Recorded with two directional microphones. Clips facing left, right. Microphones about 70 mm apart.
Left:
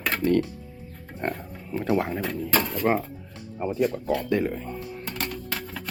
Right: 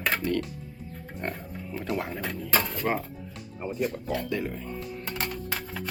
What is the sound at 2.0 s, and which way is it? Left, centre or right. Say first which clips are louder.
Speech: left 6 dB; left.